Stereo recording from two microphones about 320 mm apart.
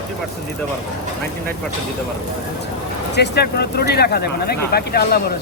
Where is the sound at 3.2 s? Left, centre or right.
Left.